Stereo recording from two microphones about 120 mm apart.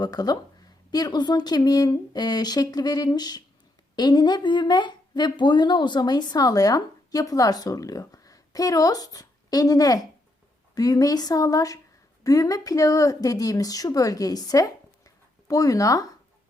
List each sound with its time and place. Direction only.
0.0 s a woman's voice: 35° left (ahead or behind)